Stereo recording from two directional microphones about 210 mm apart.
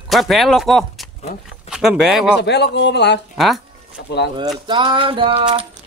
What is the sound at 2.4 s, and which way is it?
Speech, 55° left (ahead or behind).